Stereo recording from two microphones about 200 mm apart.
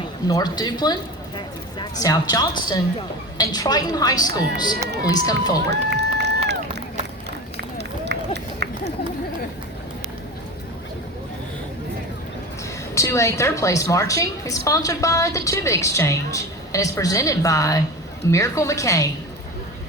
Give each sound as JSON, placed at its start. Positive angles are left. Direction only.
{"t": 0.3, "sound": "a woman's voice", "side_deg": 20}
{"t": 5.7, "sound": "run", "side_deg": -60}
{"t": 12.9, "sound": "a woman's voice", "side_deg": 15}